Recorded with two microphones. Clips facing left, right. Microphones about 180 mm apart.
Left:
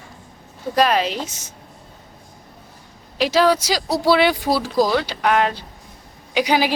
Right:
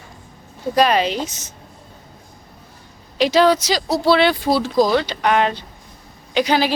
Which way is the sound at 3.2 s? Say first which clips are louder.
Right 2 dB; 5° left (ahead or behind).